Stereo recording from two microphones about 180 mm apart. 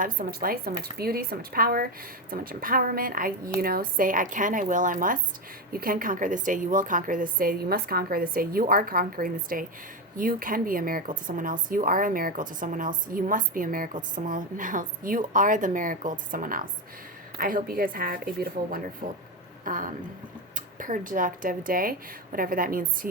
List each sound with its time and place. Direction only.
0.0 s speech: 55° right (ahead or behind)